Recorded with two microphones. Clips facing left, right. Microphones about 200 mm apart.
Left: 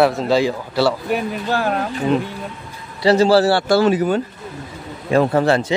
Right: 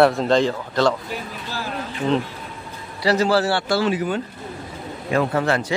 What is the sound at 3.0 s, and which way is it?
A man's voice, 25° left (ahead or behind).